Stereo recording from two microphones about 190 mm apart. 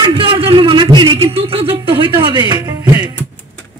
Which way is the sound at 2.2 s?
25° right (ahead or behind).